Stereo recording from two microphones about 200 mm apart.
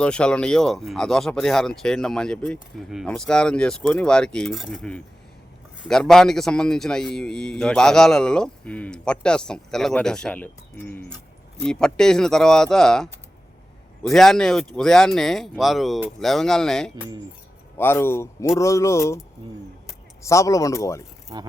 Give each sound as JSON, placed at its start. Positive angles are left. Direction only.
{"t": 0.0, "sound": "a man's voice", "side_deg": 5}
{"t": 20.2, "sound": "speech", "side_deg": 15}
{"t": 21.3, "sound": "speech", "side_deg": -20}